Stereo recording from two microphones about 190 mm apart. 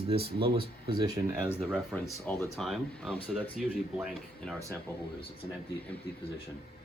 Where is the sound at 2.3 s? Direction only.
Centre (ahead or behind).